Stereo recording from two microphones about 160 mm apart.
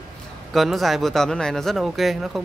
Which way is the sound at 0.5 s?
Centre (ahead or behind).